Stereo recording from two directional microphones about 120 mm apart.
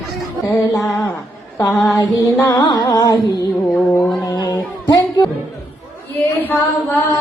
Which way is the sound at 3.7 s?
20° left (ahead or behind).